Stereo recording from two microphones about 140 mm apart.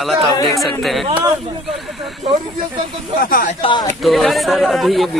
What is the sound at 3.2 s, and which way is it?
Speech, 90° left.